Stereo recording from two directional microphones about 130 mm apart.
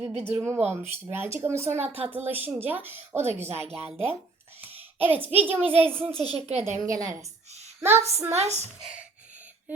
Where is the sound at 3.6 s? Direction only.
50° right (ahead or behind).